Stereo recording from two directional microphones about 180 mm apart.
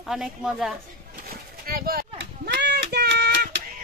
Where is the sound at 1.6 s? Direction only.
55° right (ahead or behind).